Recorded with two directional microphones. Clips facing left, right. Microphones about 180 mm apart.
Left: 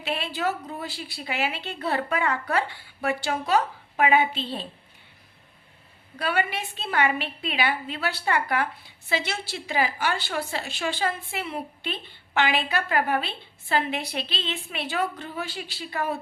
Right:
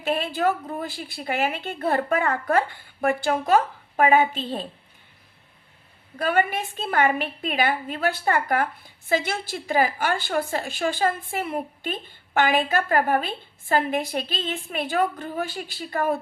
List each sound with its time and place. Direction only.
0.0 s a woman's voice: 50° right (ahead or behind)
6.1 s a woman's voice: 45° right (ahead or behind)